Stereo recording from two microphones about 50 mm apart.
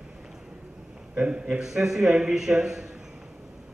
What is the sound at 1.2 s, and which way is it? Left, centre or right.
Speech, right.